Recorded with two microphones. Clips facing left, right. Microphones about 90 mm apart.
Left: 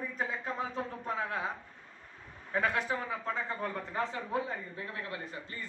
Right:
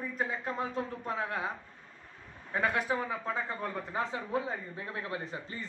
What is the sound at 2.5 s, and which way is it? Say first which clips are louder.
Speech: right 1 dB; 5° right (ahead or behind).